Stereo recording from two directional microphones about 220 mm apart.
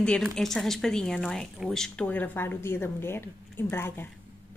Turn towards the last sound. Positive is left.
turn(degrees=10)  # may be behind; listen again after turning